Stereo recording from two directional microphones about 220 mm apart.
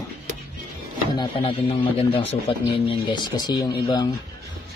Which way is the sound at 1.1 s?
20° left (ahead or behind).